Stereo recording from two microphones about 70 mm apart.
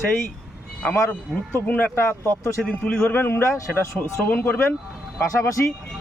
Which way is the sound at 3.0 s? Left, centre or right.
Left.